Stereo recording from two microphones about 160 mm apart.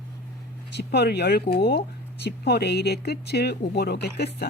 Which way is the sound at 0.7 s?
90° left.